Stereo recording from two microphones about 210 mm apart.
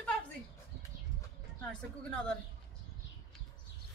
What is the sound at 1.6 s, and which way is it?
Speech, 5° left (ahead or behind).